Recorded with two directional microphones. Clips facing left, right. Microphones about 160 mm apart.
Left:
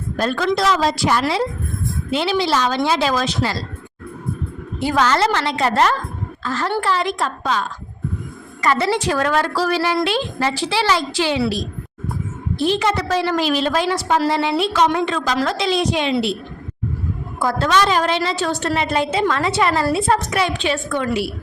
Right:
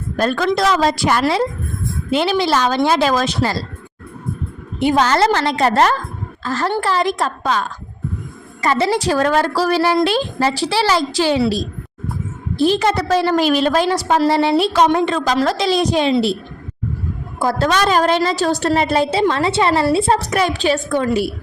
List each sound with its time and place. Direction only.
0.2 s a woman's voice: 50° right (ahead or behind)
4.8 s a woman's voice: 20° right (ahead or behind)
5.0 s a woman's voice: 35° right (ahead or behind)
8.6 s a woman's voice: 30° right (ahead or behind); by 13.8 s 50° right (ahead or behind)
13.8 s a woman's voice: 40° right (ahead or behind)
17.4 s a woman's voice: 40° right (ahead or behind)
20.3 s a woman's voice: 40° right (ahead or behind)